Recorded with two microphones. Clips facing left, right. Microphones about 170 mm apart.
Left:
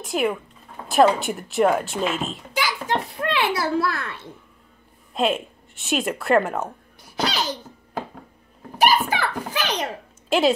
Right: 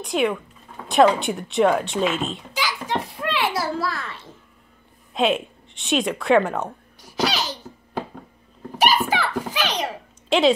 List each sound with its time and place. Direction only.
0.0 s speech: centre (ahead or behind)
2.5 s a sound: 60° left (ahead or behind)
5.1 s a woman's voice: centre (ahead or behind)
7.0 s cough: 55° left (ahead or behind)
8.8 s a sound: 55° left (ahead or behind)
10.3 s a woman's voice: centre (ahead or behind)